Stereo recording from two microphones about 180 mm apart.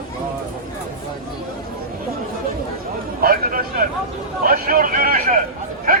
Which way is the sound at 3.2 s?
55° right (ahead or behind).